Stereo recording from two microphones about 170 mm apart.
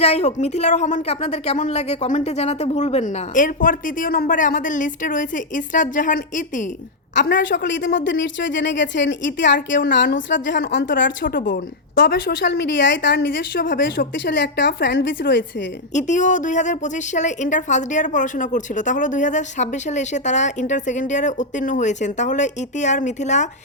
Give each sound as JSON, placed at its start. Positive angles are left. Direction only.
{"t": 0.0, "sound": "a woman's voice", "side_deg": 40}
{"t": 7.2, "sound": "a woman's voice", "side_deg": 90}
{"t": 11.3, "sound": "a woman's voice", "side_deg": 55}
{"t": 16.0, "sound": "a woman's voice", "side_deg": 45}